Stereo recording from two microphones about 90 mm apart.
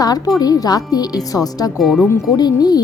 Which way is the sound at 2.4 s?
50° left (ahead or behind).